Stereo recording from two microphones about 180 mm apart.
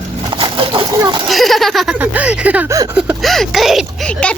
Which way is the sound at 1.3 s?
Centre (ahead or behind).